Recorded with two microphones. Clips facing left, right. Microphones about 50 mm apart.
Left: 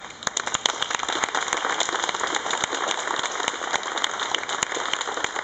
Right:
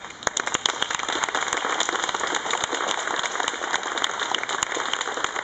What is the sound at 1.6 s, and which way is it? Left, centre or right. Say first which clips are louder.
Applause: even; centre.